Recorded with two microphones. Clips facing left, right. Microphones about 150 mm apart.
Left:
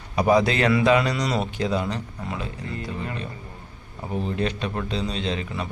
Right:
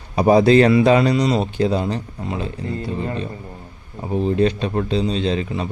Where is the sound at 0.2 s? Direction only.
35° right (ahead or behind).